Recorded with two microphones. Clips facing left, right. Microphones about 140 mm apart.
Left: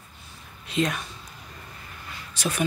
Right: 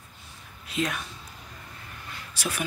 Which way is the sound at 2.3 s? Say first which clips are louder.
Left 4 dB; 10° right (ahead or behind).